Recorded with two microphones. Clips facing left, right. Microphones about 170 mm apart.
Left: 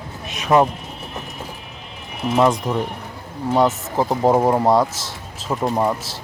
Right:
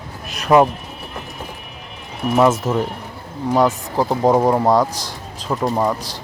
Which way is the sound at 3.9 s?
Centre (ahead or behind).